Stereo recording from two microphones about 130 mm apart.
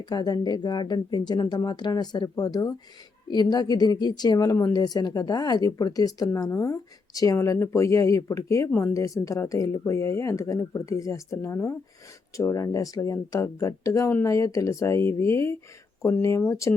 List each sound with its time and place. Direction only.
0.0 s a woman's voice: 30° left (ahead or behind)